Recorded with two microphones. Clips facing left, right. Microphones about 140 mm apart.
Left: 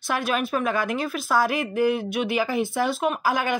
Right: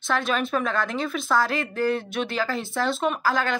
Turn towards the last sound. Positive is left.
turn(degrees=15)  # may be behind; listen again after turning